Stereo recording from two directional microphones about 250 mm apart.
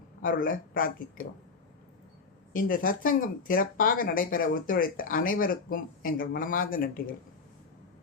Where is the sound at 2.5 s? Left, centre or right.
Left.